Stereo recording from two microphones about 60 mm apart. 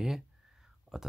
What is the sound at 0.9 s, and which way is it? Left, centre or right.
Speech, centre.